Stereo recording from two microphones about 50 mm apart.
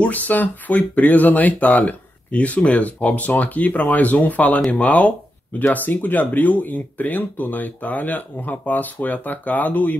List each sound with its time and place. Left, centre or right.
0.0 s speech: left
5.6 s speech: left